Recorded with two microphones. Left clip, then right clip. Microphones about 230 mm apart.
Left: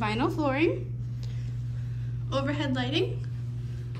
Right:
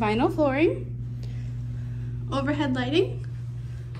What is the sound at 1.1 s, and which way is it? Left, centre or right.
Vehicle, centre.